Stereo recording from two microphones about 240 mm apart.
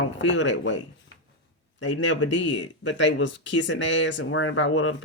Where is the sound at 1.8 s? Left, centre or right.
Left.